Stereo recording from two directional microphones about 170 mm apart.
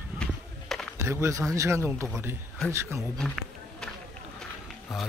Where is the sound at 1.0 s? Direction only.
15° right (ahead or behind).